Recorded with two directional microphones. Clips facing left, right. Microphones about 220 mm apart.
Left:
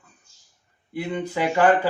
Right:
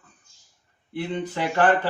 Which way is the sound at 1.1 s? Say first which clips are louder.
Left 2 dB; 10° left (ahead or behind).